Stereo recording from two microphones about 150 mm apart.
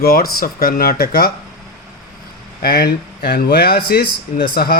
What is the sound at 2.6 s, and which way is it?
Speech, 90° left.